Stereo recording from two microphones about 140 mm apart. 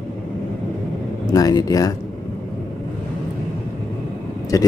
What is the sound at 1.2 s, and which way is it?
Speech, 25° left (ahead or behind).